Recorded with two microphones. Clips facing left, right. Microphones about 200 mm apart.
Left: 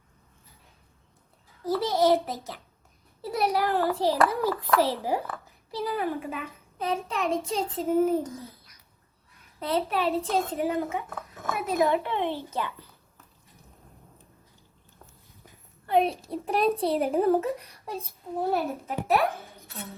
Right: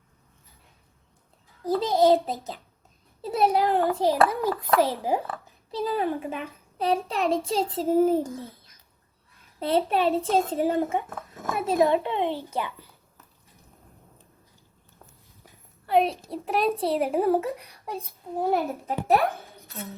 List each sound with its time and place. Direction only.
1.6 s a child's voice: 15° right (ahead or behind)
8.3 s a woman's voice: centre (ahead or behind)
9.6 s a child's voice: 30° right (ahead or behind)
12.0 s a child's voice: 15° right (ahead or behind)
15.9 s a woman's voice: centre (ahead or behind)
17.2 s a child's voice: 15° right (ahead or behind)
19.6 s speech: centre (ahead or behind)